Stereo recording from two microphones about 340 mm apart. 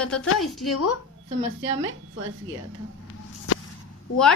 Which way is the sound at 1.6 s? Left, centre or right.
Right.